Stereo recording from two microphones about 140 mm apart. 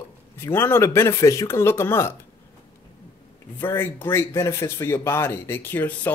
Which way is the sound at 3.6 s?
15° left (ahead or behind).